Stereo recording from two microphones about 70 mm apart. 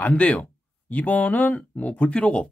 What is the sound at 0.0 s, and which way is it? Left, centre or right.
Speech, left.